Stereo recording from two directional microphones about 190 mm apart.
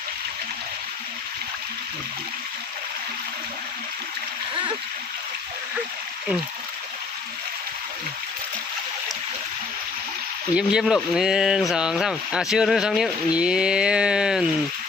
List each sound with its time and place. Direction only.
10.5 s speech: 5° right (ahead or behind)